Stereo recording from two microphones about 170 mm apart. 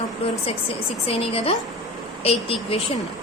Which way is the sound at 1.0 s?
35° left (ahead or behind).